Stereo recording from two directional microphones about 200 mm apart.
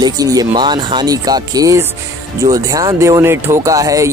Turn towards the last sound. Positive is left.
turn(degrees=-15)  # may be behind; listen again after turning